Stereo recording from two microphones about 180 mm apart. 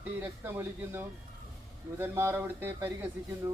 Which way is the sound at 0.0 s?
10° right (ahead or behind).